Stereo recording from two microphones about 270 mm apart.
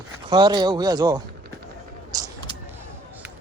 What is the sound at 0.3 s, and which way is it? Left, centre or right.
Speech, centre.